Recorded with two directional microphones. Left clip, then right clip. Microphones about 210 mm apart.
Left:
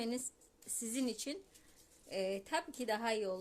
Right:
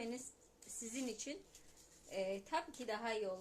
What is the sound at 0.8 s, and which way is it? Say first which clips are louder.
Speech: left 5 dB; 55° left (ahead or behind).